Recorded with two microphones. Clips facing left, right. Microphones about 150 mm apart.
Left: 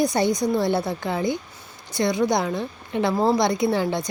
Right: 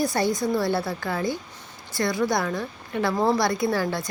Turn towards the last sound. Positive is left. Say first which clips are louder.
# left 2 dB
turn(degrees=20)  # may be behind; listen again after turning